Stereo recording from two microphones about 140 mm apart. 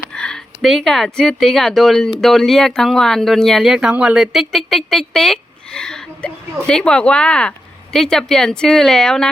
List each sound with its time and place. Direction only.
0.1 s speech: 5° left (ahead or behind)